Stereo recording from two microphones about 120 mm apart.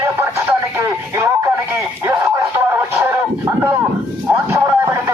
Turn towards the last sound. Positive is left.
turn(degrees=-20)  # may be behind; listen again after turning